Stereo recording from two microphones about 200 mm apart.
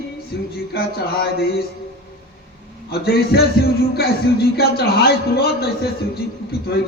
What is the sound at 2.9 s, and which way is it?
A man's voice, 50° left (ahead or behind).